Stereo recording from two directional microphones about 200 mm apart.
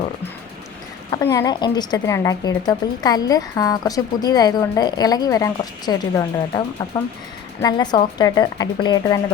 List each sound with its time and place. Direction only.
1.2 s a woman's voice: 15° left (ahead or behind)
7.6 s a woman's voice: 20° left (ahead or behind)